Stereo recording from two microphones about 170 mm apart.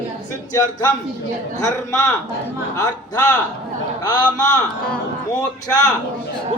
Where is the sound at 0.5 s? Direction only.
20° left (ahead or behind).